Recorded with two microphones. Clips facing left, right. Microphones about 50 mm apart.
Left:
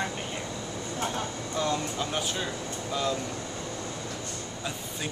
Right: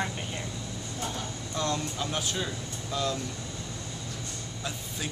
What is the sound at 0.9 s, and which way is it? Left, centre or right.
Speech, left.